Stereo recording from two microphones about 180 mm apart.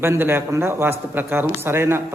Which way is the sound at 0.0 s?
15° right (ahead or behind).